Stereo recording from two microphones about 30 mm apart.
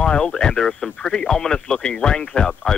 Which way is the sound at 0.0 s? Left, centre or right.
Left.